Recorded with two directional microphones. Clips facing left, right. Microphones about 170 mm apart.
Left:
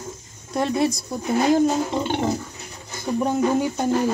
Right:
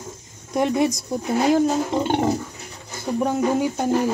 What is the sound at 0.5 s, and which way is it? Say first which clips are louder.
Speech: right 2 dB; 15° right (ahead or behind).